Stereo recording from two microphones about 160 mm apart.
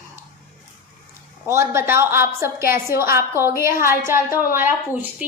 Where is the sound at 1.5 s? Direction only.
15° right (ahead or behind).